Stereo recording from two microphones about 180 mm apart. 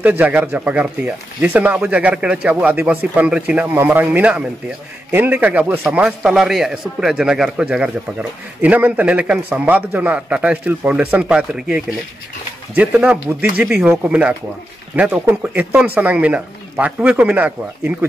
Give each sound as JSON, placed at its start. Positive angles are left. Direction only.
{"t": 0.0, "sound": "speech", "side_deg": -10}